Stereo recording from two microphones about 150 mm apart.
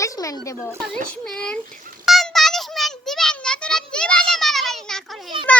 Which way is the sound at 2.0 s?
Centre (ahead or behind).